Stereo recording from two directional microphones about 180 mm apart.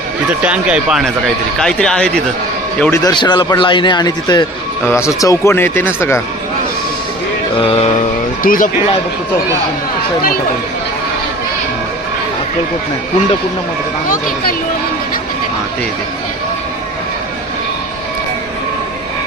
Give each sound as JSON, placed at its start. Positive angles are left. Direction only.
{"t": 0.4, "sound": "speech", "side_deg": -5}
{"t": 2.8, "sound": "a man's voice", "side_deg": 15}
{"t": 7.6, "sound": "a sound", "side_deg": 30}
{"t": 8.4, "sound": "speech", "side_deg": 50}